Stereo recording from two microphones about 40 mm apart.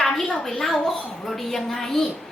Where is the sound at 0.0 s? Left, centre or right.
Centre.